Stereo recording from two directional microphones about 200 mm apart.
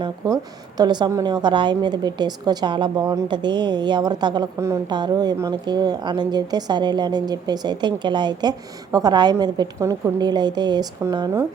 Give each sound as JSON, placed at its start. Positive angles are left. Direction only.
{"t": 0.2, "sound": "a woman's voice", "side_deg": -20}